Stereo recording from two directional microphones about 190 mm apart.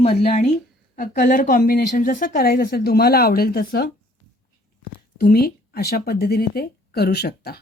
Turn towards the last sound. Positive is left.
turn(degrees=55)  # may be behind; listen again after turning